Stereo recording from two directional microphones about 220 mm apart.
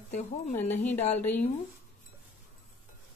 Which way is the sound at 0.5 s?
10° left (ahead or behind).